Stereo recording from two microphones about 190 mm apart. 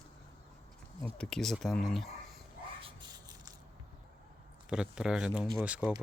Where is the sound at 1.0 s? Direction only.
5° left (ahead or behind).